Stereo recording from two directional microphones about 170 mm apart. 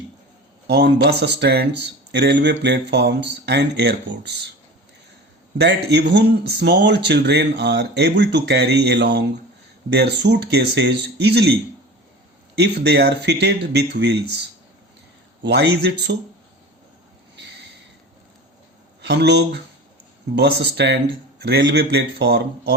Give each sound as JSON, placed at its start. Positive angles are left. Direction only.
{"t": 0.7, "sound": "speech", "side_deg": -90}
{"t": 5.5, "sound": "speech", "side_deg": -80}
{"t": 12.5, "sound": "speech", "side_deg": -80}
{"t": 15.4, "sound": "speech", "side_deg": -75}
{"t": 19.0, "sound": "speech", "side_deg": -85}